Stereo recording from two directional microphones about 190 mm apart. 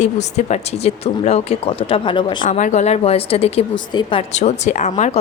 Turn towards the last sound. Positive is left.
turn(degrees=40)  # may be behind; listen again after turning